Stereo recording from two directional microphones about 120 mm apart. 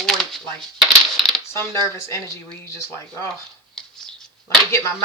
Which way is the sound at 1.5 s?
25° left (ahead or behind).